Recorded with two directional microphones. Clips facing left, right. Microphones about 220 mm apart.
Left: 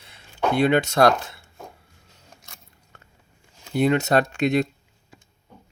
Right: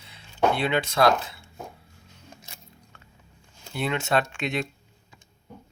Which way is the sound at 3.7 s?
40° left (ahead or behind).